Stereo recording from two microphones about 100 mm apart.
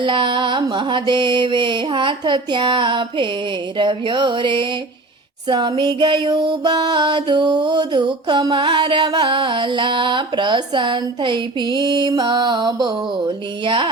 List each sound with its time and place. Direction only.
0.0 s music: 55° right (ahead or behind)